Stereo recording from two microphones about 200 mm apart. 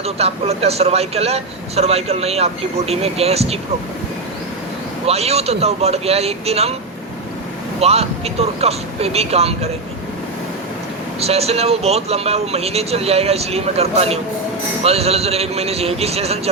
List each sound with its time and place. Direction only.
0.0 s a man's voice: 30° right (ahead or behind)
5.0 s a man's voice: 30° right (ahead or behind)
7.8 s a man's voice: 30° right (ahead or behind)
11.2 s a man's voice: 30° right (ahead or behind)